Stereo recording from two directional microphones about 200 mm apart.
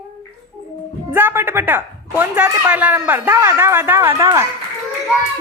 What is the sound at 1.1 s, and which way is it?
Speech, 10° right (ahead or behind).